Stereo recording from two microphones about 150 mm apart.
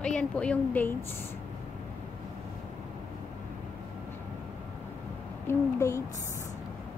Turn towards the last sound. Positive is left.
turn(degrees=20)  # may be behind; listen again after turning